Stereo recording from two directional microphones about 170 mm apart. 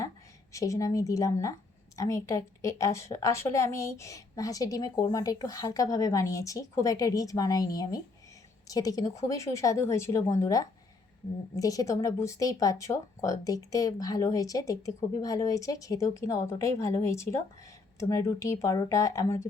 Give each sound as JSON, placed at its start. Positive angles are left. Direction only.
{"t": 0.5, "sound": "a woman's voice", "side_deg": 20}